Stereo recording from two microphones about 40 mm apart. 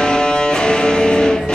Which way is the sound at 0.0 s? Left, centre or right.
Left.